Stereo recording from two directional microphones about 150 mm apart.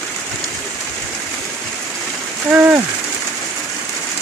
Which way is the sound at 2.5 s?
10° right (ahead or behind).